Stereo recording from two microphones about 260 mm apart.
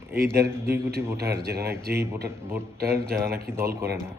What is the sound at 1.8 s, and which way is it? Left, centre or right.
Speech, right.